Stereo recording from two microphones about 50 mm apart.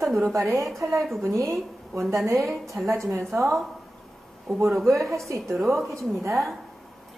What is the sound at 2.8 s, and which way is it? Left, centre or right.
Speech, right.